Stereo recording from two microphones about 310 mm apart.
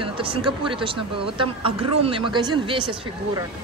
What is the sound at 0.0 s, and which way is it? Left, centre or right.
Speech, centre.